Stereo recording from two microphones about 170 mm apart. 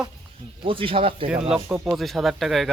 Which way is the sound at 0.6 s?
30° right (ahead or behind).